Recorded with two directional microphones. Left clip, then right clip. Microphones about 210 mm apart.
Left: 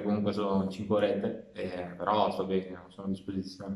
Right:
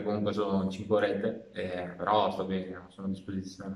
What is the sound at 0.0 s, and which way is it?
A man's voice, 5° left (ahead or behind).